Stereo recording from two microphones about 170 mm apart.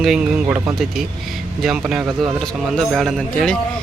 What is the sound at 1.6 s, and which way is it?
A man's voice, 5° right (ahead or behind).